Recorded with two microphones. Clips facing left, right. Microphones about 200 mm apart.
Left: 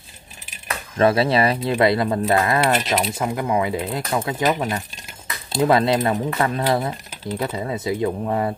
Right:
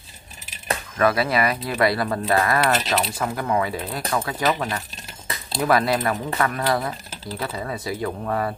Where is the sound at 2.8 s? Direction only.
5° left (ahead or behind).